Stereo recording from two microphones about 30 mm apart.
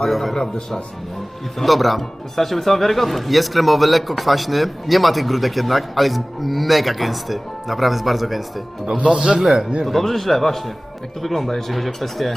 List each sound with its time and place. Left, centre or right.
0.0 s speech: centre
1.6 s speech: centre
9.0 s a man's voice: right
9.8 s a man's voice: centre